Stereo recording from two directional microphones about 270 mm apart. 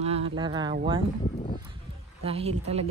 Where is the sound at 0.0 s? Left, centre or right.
Right.